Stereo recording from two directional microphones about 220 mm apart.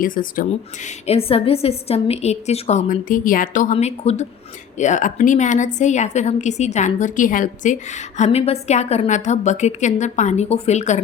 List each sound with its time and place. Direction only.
0.0 s a woman's voice: 40° left (ahead or behind)
0.9 s a woman's voice: 30° left (ahead or behind)